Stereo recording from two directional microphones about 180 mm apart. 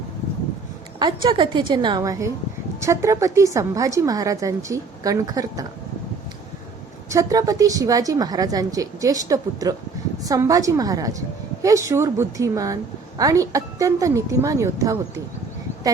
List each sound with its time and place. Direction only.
0.9 s a woman's voice: 25° right (ahead or behind)
7.1 s a woman's voice: 20° right (ahead or behind)